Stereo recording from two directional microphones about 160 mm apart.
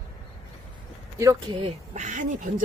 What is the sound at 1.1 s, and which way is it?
Speech, 20° right (ahead or behind).